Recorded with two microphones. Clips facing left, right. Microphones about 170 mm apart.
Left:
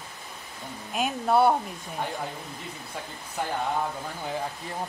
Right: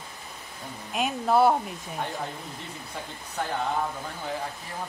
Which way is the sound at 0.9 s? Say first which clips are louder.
Even; centre (ahead or behind).